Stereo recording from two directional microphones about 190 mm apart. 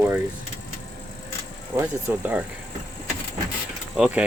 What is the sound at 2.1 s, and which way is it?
Speech, 10° right (ahead or behind).